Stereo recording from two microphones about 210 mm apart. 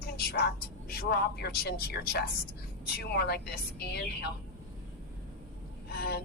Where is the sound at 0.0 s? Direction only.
50° left (ahead or behind).